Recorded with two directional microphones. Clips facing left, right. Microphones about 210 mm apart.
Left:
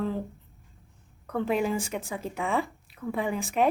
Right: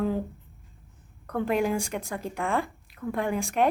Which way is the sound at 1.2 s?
Centre (ahead or behind).